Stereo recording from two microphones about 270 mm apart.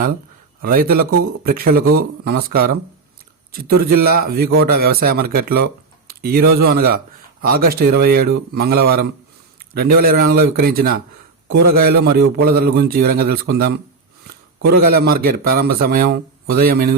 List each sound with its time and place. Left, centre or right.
0.6 s a man's voice: right